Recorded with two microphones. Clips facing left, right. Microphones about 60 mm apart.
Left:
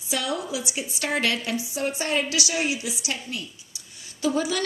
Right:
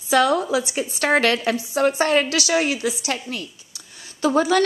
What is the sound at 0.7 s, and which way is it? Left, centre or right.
A woman's voice, right.